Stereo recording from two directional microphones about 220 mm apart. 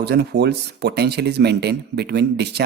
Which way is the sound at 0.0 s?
50° right (ahead or behind).